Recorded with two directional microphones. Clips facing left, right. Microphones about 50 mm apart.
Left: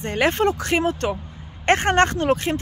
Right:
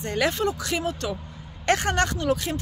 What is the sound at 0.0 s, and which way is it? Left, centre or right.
Speech, left.